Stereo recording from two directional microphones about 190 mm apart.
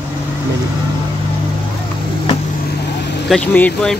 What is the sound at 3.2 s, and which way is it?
Speech, 5° left (ahead or behind).